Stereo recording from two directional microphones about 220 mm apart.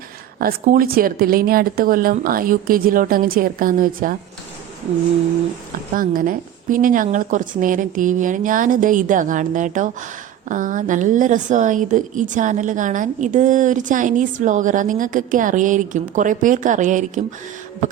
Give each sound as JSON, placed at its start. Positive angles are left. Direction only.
{"t": 0.3, "sound": "speech", "side_deg": -40}
{"t": 5.9, "sound": "speech", "side_deg": -40}